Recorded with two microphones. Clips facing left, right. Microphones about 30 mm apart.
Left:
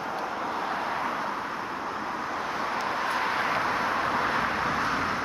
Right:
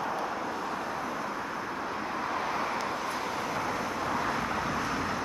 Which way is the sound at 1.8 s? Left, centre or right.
Centre.